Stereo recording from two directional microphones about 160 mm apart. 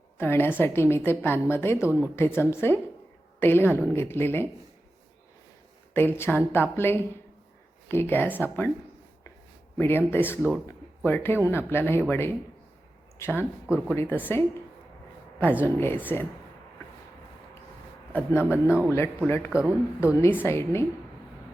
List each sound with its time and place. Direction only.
0.2 s a woman's voice: 15° left (ahead or behind)
5.9 s a woman's voice: 15° left (ahead or behind)
9.7 s a woman's voice: 15° left (ahead or behind)
10.7 s a sound: 15° left (ahead or behind)
11.4 s a woman's voice: 15° left (ahead or behind)
13.7 s speech: 10° right (ahead or behind)
13.9 s a woman's voice: 15° left (ahead or behind)
15.6 s a woman's voice: 15° left (ahead or behind)
18.1 s a woman's voice: 15° left (ahead or behind)
18.4 s speech: 10° right (ahead or behind)
20.2 s a woman's voice: 15° left (ahead or behind)